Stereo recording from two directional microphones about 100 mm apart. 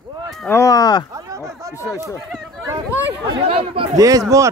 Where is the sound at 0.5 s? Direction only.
30° left (ahead or behind).